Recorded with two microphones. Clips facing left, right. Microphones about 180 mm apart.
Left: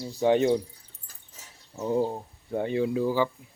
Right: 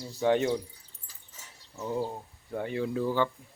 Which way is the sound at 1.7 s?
25° left (ahead or behind).